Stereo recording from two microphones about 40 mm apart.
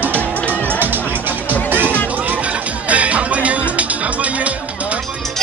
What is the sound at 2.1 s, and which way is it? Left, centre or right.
Music, right.